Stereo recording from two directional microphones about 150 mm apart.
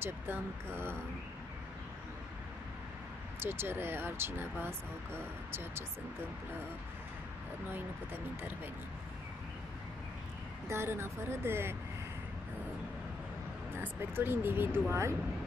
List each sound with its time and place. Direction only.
0.0 s speech: 15° right (ahead or behind)
3.3 s speech: 15° right (ahead or behind)
7.7 s speech: 15° right (ahead or behind)
10.7 s speech: 15° right (ahead or behind)
13.7 s speech: 15° right (ahead or behind)